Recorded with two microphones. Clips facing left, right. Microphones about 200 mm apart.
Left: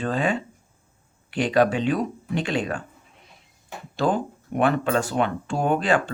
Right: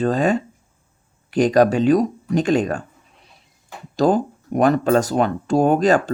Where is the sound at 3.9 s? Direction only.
40° right (ahead or behind).